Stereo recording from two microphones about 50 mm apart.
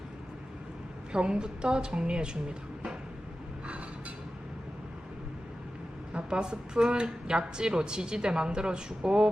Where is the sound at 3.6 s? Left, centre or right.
Right.